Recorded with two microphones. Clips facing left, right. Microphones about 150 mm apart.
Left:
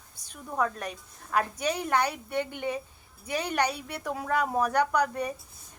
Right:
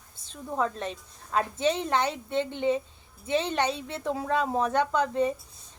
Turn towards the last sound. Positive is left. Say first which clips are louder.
# right 2 dB
turn(degrees=-25)  # may be behind; listen again after turning